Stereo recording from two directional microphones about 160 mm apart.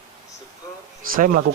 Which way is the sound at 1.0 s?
55° right (ahead or behind).